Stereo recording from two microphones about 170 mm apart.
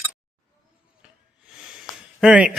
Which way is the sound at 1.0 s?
5° right (ahead or behind).